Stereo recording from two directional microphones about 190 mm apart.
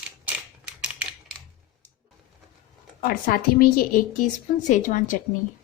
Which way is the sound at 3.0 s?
50° left (ahead or behind).